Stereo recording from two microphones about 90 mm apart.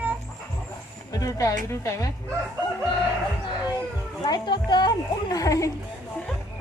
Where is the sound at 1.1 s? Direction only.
40° left (ahead or behind).